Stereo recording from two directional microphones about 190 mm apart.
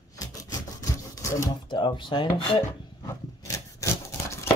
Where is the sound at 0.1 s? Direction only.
20° left (ahead or behind).